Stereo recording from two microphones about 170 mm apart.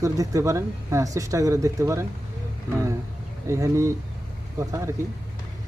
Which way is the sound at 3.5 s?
15° right (ahead or behind).